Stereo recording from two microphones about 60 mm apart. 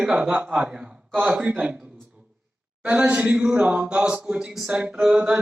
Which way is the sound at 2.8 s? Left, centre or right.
Right.